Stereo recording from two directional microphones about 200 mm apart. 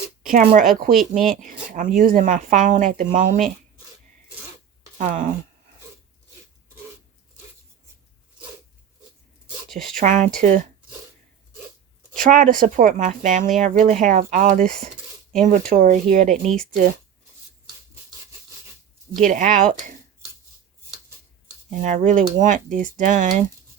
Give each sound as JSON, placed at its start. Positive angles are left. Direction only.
{"t": 0.2, "sound": "speech", "side_deg": -45}
{"t": 4.9, "sound": "speech", "side_deg": -40}
{"t": 9.9, "sound": "speech", "side_deg": -40}
{"t": 12.1, "sound": "speech", "side_deg": -40}
{"t": 19.1, "sound": "speech", "side_deg": -40}
{"t": 21.8, "sound": "speech", "side_deg": -40}